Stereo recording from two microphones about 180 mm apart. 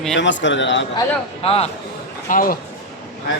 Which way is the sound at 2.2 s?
50° left (ahead or behind).